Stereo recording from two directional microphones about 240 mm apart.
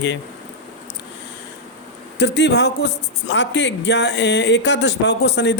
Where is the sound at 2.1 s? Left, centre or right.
Left.